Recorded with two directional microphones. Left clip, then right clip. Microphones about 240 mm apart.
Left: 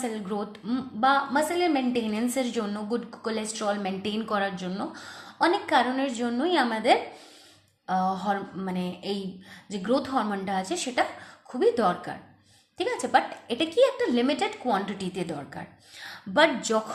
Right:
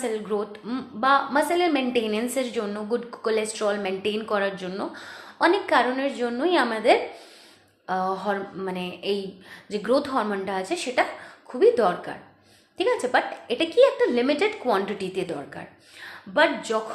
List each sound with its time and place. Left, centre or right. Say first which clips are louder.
0.0 s a woman's voice: right 5 dB; left
16.3 s a woman's voice: right 1 dB; left